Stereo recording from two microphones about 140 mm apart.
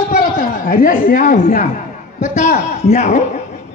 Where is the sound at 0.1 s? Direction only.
90° left.